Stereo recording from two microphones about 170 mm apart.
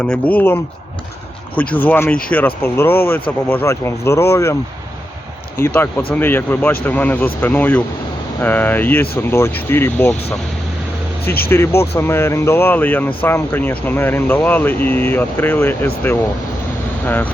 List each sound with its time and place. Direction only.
0.0 s speech: 5° left (ahead or behind)
5.5 s speech: 15° left (ahead or behind)
11.4 s speech: 15° left (ahead or behind)